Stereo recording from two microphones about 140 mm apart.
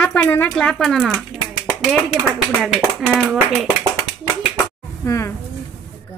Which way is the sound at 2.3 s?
5° right (ahead or behind).